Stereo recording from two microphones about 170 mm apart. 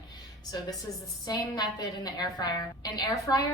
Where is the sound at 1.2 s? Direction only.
25° left (ahead or behind).